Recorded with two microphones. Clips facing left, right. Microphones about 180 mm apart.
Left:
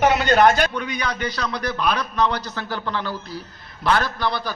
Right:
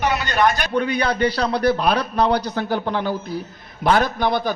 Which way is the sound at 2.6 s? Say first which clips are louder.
Right 5 dB; 50° right (ahead or behind).